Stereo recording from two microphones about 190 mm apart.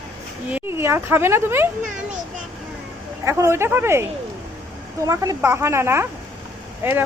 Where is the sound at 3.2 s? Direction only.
15° right (ahead or behind).